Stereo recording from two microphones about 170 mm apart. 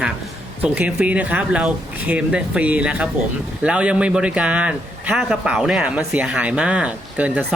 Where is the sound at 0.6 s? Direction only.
10° right (ahead or behind).